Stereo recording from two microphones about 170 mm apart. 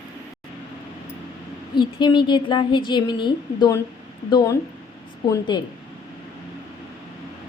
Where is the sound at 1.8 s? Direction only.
25° left (ahead or behind).